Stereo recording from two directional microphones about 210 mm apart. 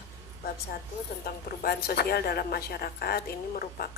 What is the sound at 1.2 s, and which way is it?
A woman's voice, 45° left (ahead or behind).